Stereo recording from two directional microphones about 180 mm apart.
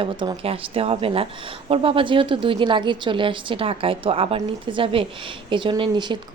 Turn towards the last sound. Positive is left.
turn(degrees=-25)  # may be behind; listen again after turning